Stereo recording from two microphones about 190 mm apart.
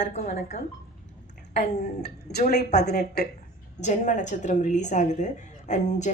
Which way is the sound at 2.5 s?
60° left (ahead or behind).